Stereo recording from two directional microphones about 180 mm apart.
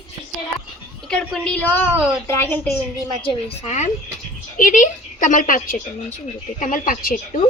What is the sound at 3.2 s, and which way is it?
A woman's voice, 30° left (ahead or behind).